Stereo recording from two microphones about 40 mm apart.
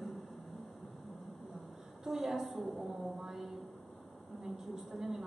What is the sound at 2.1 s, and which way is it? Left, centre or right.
Speech, centre.